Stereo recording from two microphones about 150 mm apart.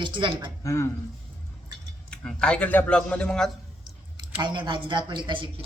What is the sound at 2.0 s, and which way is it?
Speech, 5° left (ahead or behind).